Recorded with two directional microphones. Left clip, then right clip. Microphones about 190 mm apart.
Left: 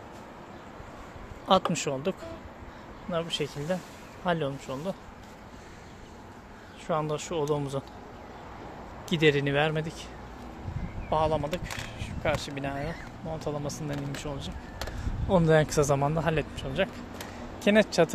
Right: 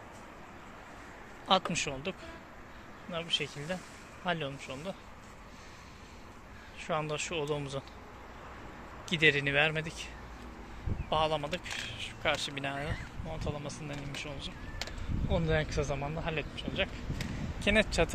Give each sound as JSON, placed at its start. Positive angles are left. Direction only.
{"t": 1.5, "sound": "speech", "side_deg": 20}
{"t": 6.9, "sound": "speech", "side_deg": 10}
{"t": 9.1, "sound": "speech", "side_deg": 25}
{"t": 11.1, "sound": "speech", "side_deg": 10}
{"t": 13.3, "sound": "speech", "side_deg": 25}